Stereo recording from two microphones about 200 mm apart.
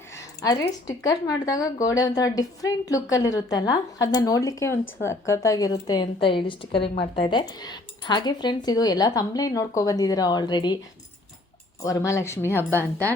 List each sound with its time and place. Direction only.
0.2 s a sound: 20° left (ahead or behind)
0.9 s a woman's voice: 15° left (ahead or behind)
11.8 s a woman's voice: 15° left (ahead or behind)